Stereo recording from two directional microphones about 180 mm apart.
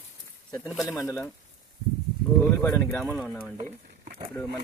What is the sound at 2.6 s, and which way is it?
Speech, 10° left (ahead or behind).